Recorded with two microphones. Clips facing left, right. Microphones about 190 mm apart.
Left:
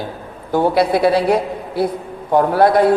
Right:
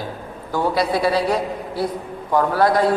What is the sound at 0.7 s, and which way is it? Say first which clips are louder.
Speech: left 4 dB; 55° left (ahead or behind).